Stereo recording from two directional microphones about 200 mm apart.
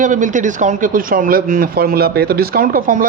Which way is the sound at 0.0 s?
40° right (ahead or behind).